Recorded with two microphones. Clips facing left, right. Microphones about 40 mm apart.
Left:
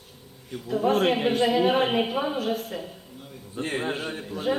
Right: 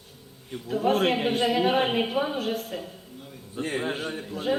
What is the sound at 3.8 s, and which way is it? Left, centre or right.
Speech, centre.